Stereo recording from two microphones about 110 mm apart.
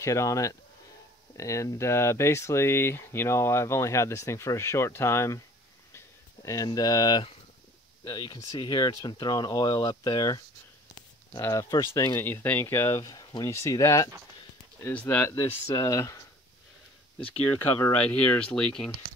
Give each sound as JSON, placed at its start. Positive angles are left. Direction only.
{"t": 0.0, "sound": "speech", "side_deg": 30}
{"t": 5.9, "sound": "a sound", "side_deg": 30}
{"t": 8.0, "sound": "speech", "side_deg": 40}
{"t": 11.4, "sound": "speech", "side_deg": 30}
{"t": 13.1, "sound": "speech", "side_deg": 40}
{"t": 13.5, "sound": "speech", "side_deg": 25}
{"t": 14.8, "sound": "speech", "side_deg": 20}
{"t": 15.6, "sound": "speech", "side_deg": 30}
{"t": 17.6, "sound": "speech", "side_deg": 15}